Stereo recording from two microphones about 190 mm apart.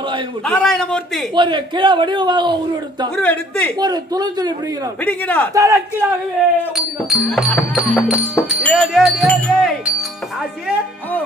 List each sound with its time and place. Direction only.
0.5 s speech: 5° left (ahead or behind)
1.3 s a man's voice: 25° right (ahead or behind)
3.2 s speech: 10° left (ahead or behind)
3.8 s a man's voice: 20° right (ahead or behind)
5.0 s speech: 10° left (ahead or behind)
5.5 s a man's voice: 15° right (ahead or behind)
7.1 s speech: centre (ahead or behind)